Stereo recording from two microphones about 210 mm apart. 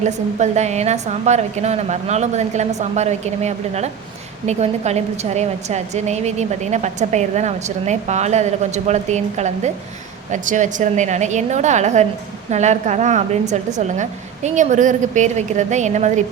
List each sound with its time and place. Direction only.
0.1 s a woman's voice: 35° right (ahead or behind)